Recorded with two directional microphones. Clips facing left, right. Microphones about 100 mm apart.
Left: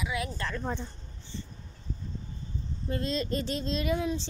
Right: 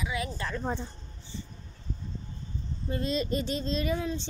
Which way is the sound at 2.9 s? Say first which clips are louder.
Right 1 dB; 5° right (ahead or behind).